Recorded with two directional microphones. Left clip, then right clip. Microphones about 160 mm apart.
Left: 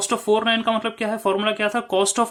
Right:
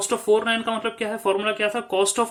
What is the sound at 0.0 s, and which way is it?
Speech, 30° left (ahead or behind).